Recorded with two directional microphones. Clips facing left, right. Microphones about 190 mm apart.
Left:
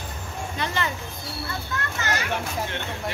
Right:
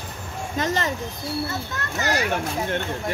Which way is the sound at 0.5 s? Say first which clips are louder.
Right 4 dB; 40° right (ahead or behind).